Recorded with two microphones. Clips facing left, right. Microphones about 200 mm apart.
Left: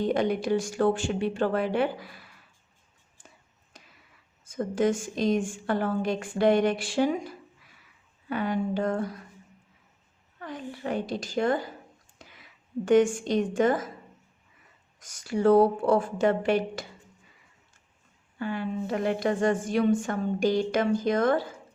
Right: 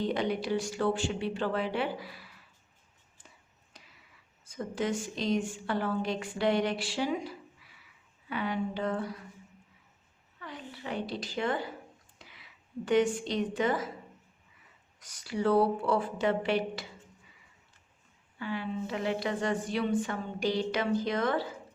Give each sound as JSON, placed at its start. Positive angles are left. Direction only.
{"t": 0.0, "sound": "speech", "side_deg": 50}
{"t": 4.4, "sound": "speech", "side_deg": 50}
{"t": 10.4, "sound": "a woman's voice", "side_deg": 45}
{"t": 14.9, "sound": "speech", "side_deg": 45}
{"t": 18.3, "sound": "speech", "side_deg": 45}